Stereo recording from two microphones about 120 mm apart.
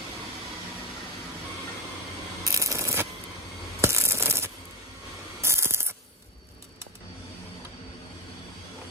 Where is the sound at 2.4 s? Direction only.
25° right (ahead or behind).